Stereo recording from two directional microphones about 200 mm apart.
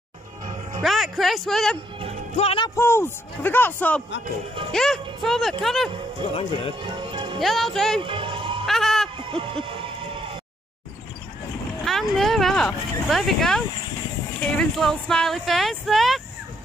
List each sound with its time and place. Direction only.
0.8 s speech: centre (ahead or behind)
2.3 s speech: 30° left (ahead or behind)
2.7 s a man's voice: 10° left (ahead or behind)
6.8 s music: 25° right (ahead or behind)
7.3 s speech: centre (ahead or behind)
8.0 s music: 25° right (ahead or behind)
8.6 s a sound: centre (ahead or behind)
9.3 s a sound: 25° right (ahead or behind)
11.8 s speech: centre (ahead or behind)